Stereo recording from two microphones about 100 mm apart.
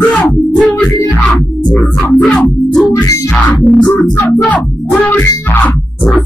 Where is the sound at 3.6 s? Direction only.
10° left (ahead or behind).